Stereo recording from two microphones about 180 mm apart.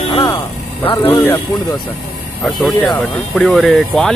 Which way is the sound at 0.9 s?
15° left (ahead or behind).